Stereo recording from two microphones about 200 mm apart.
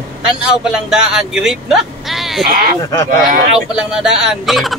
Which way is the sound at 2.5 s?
45° right (ahead or behind).